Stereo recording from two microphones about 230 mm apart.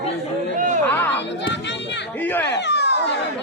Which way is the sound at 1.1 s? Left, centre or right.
Left.